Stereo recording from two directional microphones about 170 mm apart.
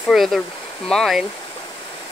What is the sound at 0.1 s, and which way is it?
Speech, centre (ahead or behind).